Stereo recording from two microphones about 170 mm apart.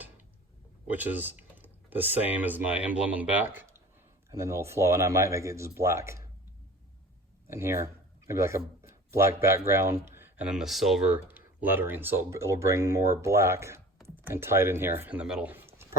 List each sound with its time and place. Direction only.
0.9 s speech: 10° right (ahead or behind)
7.4 s speech: 15° right (ahead or behind)